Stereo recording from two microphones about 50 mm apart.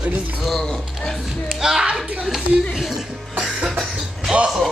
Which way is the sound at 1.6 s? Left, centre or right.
Centre.